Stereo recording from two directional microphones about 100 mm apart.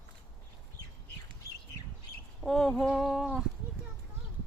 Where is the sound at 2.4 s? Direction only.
5° left (ahead or behind).